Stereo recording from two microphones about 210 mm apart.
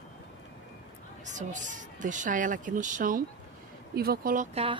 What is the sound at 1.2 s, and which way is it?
Speech, 35° right (ahead or behind).